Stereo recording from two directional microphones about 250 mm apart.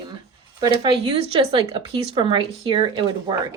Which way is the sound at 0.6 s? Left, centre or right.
Right.